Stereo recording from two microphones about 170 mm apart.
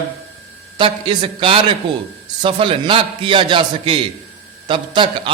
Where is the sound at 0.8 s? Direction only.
30° right (ahead or behind).